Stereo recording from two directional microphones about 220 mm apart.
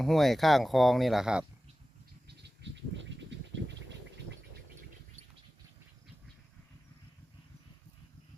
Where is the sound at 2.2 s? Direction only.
50° right (ahead or behind).